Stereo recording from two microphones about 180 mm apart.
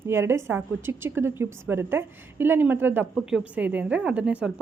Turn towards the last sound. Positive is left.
turn(degrees=-5)  # may be behind; listen again after turning